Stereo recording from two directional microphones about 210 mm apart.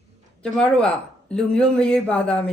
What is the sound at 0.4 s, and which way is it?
A woman's voice, 5° left (ahead or behind).